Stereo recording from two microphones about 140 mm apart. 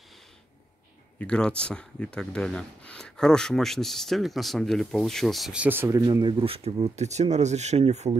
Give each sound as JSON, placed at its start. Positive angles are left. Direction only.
{"t": 1.2, "sound": "speech", "side_deg": 5}
{"t": 6.0, "sound": "speech", "side_deg": -35}